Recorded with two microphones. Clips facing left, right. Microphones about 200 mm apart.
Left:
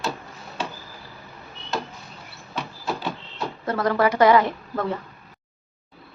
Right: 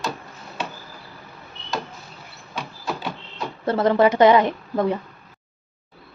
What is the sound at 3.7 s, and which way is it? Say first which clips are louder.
A woman's voice: right 4 dB; 25° right (ahead or behind).